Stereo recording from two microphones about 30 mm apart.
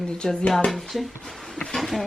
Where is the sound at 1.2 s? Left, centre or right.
Centre.